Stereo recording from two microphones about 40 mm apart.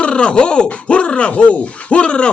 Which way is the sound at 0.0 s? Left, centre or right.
Left.